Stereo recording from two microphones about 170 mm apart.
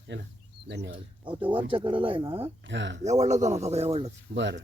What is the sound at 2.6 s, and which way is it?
Speech, 90° right.